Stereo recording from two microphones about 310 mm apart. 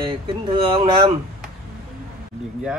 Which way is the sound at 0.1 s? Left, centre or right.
Centre.